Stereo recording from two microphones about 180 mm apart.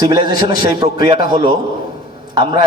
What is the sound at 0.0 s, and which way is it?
A man's voice, 25° right (ahead or behind).